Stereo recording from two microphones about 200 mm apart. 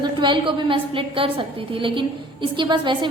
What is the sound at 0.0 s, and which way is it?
A woman's voice, 25° right (ahead or behind).